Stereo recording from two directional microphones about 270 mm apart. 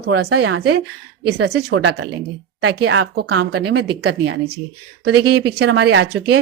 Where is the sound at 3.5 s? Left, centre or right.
Right.